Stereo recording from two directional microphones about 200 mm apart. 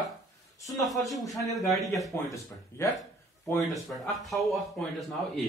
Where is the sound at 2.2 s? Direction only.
15° left (ahead or behind).